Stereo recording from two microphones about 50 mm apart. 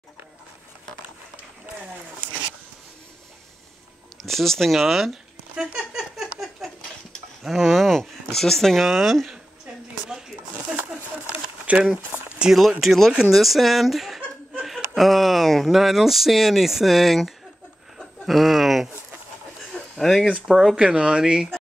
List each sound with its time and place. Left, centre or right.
4.2 s speech: centre
5.6 s a sound: centre
7.4 s speech: centre
11.2 s a sound: right
12.4 s speech: centre
12.8 s speech: centre
17.9 s a sound: centre
20.0 s speech: centre
20.7 s speech: right